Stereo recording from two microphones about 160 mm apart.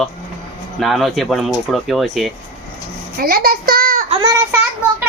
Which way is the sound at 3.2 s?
70° right (ahead or behind).